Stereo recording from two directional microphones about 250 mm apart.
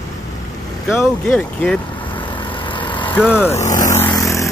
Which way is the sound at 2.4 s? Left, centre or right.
Centre.